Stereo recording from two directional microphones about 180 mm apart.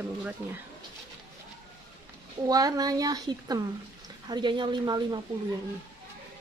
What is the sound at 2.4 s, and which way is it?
A woman's voice, 20° right (ahead or behind).